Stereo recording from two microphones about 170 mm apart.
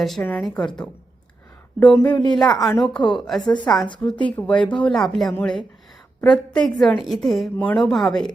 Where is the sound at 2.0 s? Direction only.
10° left (ahead or behind).